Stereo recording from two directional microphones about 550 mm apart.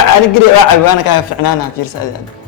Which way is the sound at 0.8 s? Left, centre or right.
Left.